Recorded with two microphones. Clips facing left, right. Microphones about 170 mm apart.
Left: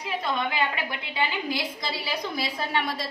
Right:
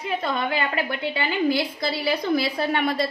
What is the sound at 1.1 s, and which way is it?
A woman's voice, 60° right (ahead or behind).